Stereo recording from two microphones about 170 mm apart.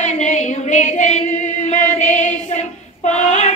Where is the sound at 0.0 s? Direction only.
45° left (ahead or behind).